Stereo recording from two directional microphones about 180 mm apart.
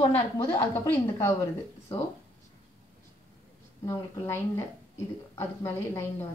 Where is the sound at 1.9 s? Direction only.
30° left (ahead or behind).